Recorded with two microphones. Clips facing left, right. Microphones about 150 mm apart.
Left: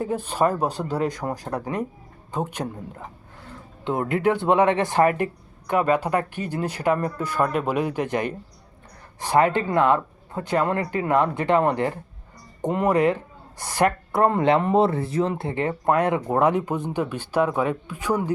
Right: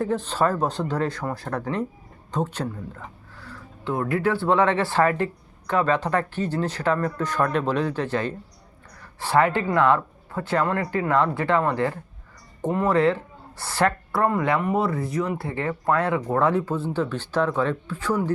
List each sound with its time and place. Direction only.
0.0 s speech: 10° left (ahead or behind)